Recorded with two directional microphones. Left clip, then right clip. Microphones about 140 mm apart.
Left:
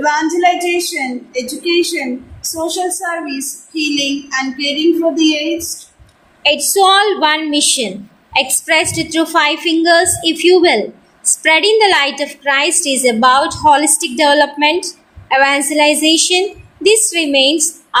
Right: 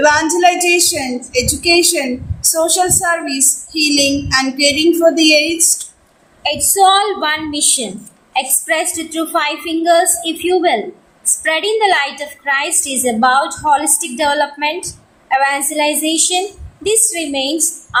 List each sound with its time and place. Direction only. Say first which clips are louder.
0.0 s child singing: right 2 dB; 35° right (ahead or behind)
6.4 s a woman's voice: left 1 dB; 45° left (ahead or behind)